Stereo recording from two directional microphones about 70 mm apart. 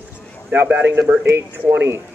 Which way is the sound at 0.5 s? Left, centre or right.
Right.